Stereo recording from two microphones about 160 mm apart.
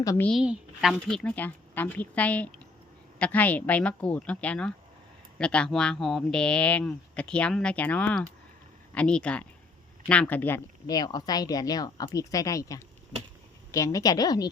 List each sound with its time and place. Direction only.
0.0 s speech: 20° left (ahead or behind)
0.3 s speech: 5° right (ahead or behind); by 10.6 s 10° left (ahead or behind)
10.8 s speech: 25° left (ahead or behind)